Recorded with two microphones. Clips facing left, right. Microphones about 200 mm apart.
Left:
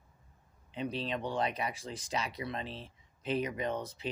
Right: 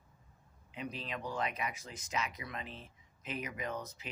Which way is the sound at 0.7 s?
30° left (ahead or behind).